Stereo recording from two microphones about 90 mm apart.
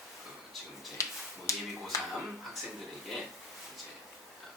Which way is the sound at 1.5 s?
35° left (ahead or behind).